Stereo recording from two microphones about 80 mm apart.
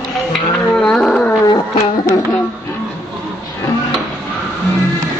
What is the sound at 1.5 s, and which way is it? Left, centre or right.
Music, left.